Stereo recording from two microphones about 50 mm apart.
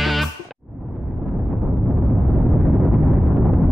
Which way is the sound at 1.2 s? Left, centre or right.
Centre.